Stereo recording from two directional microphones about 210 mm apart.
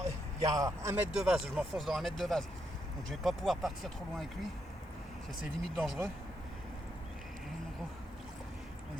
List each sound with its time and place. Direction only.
0.0 s speech: 15° right (ahead or behind); by 4.3 s centre (ahead or behind)
5.7 s speech: centre (ahead or behind)